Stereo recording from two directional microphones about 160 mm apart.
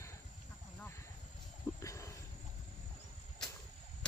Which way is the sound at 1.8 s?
20° left (ahead or behind).